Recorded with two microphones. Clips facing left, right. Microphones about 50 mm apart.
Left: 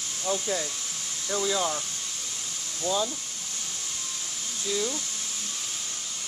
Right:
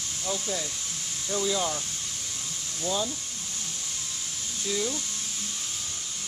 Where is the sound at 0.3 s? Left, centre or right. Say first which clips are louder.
Left 3 dB; centre.